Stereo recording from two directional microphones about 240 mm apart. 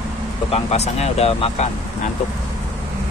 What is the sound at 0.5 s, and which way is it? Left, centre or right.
Speech, left.